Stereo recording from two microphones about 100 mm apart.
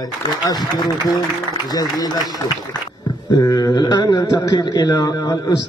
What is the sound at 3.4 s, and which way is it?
A man's voice, 40° left (ahead or behind).